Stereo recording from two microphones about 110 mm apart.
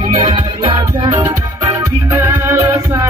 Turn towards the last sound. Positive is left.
turn(degrees=-25)  # may be behind; listen again after turning